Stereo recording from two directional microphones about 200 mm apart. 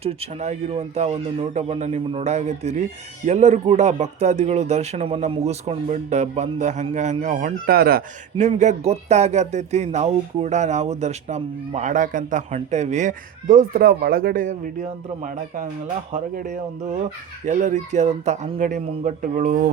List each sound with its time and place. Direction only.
0.0 s speech: 30° right (ahead or behind)